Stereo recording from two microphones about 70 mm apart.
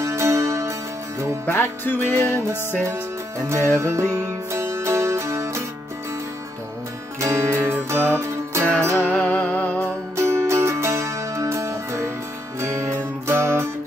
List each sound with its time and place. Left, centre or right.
0.0 s music: right
1.4 s music: left
2.8 s music: right
4.6 s music: right
7.2 s music: right
9.0 s music: left
10.1 s music: right